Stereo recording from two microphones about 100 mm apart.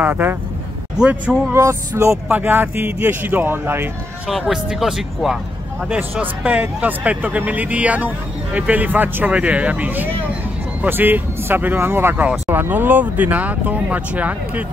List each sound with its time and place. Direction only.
0.0 s speech: 20° right (ahead or behind)
0.9 s speech: 10° right (ahead or behind)
1.5 s speech: 30° right (ahead or behind)
2.2 s speech: 15° right (ahead or behind)
4.3 s speech: centre (ahead or behind)
5.9 s speech: 15° right (ahead or behind)